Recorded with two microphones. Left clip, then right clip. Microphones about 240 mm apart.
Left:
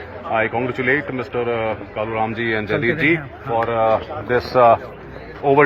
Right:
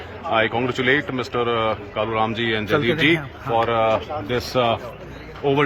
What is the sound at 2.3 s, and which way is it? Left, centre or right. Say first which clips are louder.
Speech: left 1 dB; centre.